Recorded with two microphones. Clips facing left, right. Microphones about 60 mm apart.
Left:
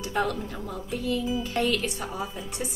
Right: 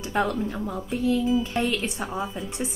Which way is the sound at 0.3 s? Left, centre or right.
Right.